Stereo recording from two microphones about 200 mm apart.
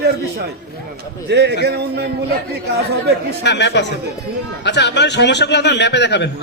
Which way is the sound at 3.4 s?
60° left (ahead or behind).